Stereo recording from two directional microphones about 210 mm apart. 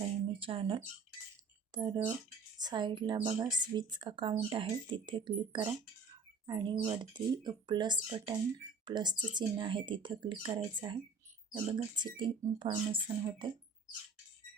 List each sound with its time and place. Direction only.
0.3 s speech: 25° right (ahead or behind)